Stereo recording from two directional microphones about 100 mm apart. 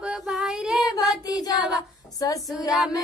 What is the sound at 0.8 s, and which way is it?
Child singing, 35° left (ahead or behind).